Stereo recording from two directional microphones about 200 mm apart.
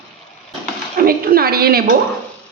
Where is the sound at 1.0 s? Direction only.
45° right (ahead or behind).